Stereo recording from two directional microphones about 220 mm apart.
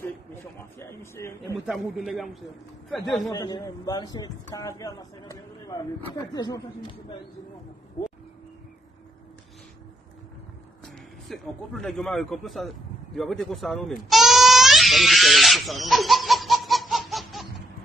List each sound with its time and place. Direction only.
0.0 s a sound: 10° left (ahead or behind)
1.7 s a man's voice: centre (ahead or behind)
3.3 s speech: 15° left (ahead or behind)
11.2 s a man's voice: centre (ahead or behind)